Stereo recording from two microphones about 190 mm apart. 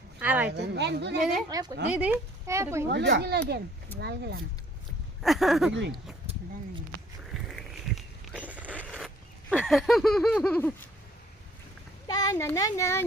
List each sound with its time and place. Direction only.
0.2 s a woman's voice: 10° right (ahead or behind)
0.5 s speech: 65° right (ahead or behind)
1.2 s speech: centre (ahead or behind)
1.5 s speech: 20° right (ahead or behind)
2.9 s speech: 65° right (ahead or behind)
3.9 s speech: 10° left (ahead or behind)
5.2 s speech: centre (ahead or behind)
7.3 s a sound: centre (ahead or behind)
12.0 s a child's voice: 20° left (ahead or behind)